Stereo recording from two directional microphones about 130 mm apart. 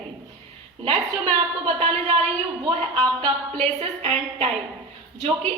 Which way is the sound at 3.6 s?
50° right (ahead or behind).